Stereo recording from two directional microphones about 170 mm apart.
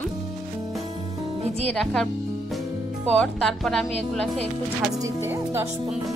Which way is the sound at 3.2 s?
Centre (ahead or behind).